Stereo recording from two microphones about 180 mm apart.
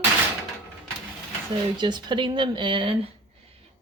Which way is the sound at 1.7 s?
25° right (ahead or behind).